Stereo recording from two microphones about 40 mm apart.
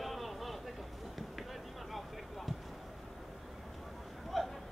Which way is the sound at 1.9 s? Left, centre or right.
Centre.